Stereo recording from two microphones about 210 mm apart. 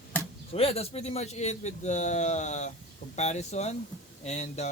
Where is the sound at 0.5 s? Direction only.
30° left (ahead or behind).